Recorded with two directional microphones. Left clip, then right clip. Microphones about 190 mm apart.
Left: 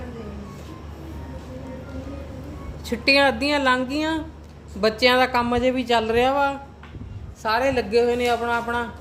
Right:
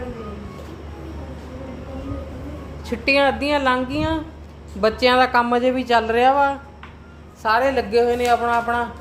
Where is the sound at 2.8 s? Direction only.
5° left (ahead or behind).